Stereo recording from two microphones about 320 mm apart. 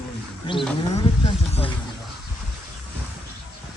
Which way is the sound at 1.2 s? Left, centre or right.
Centre.